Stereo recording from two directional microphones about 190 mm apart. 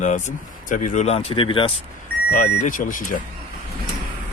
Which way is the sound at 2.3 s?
45° left (ahead or behind).